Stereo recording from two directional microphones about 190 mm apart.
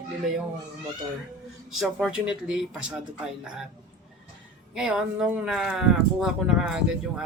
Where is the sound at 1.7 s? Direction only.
5° right (ahead or behind).